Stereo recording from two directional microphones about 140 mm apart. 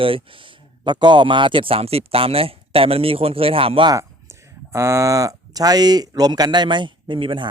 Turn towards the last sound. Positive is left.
turn(degrees=-35)  # may be behind; listen again after turning